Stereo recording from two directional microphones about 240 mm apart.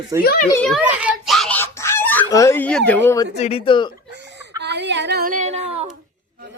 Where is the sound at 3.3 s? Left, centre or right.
Left.